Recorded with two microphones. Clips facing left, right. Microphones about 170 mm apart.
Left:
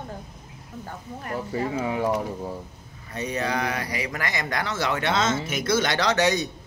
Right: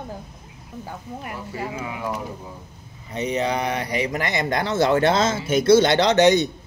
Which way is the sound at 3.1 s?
20° right (ahead or behind).